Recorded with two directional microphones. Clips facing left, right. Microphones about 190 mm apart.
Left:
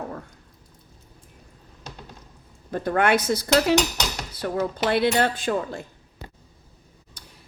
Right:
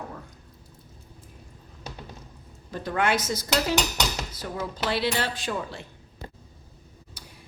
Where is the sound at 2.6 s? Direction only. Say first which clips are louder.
Left 5 dB; 55° left (ahead or behind).